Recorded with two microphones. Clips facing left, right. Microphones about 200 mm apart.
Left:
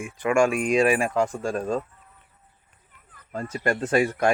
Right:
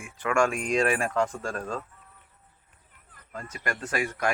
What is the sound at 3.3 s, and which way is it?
Speech, 30° left (ahead or behind).